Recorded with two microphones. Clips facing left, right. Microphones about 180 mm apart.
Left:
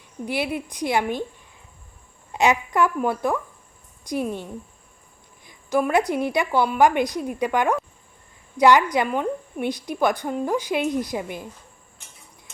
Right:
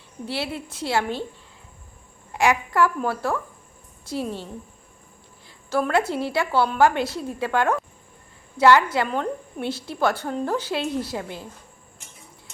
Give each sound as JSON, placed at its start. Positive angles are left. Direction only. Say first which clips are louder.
{"t": 0.3, "sound": "a woman's voice", "louder": "left 3 dB", "side_deg": 15}
{"t": 2.3, "sound": "a woman's voice", "louder": "left 1 dB", "side_deg": 20}
{"t": 5.5, "sound": "a woman's voice", "louder": "left 2 dB", "side_deg": 15}